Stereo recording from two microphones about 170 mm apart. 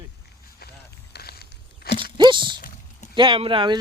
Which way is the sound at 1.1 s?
65° left (ahead or behind).